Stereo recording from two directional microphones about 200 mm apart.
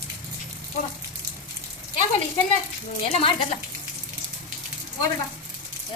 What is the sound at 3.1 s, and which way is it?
Speech, 25° left (ahead or behind).